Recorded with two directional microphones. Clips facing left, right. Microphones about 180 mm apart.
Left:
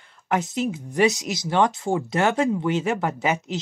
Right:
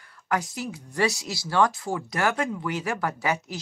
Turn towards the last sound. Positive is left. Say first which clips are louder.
# left 4 dB
turn(degrees=20)  # may be behind; listen again after turning